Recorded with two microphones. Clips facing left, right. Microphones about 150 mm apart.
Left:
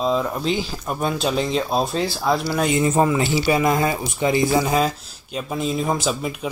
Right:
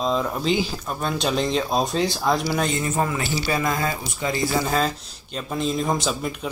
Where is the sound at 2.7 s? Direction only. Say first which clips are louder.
Left 6 dB; 15° left (ahead or behind).